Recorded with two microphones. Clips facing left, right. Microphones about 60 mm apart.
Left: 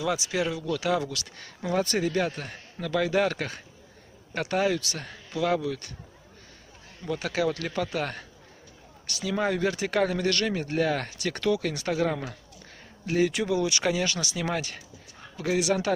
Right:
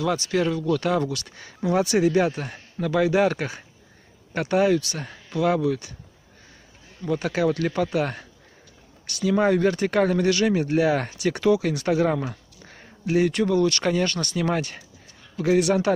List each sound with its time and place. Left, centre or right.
0.0 s speech: centre
7.2 s speech: centre
11.4 s speech: centre
11.7 s speech: centre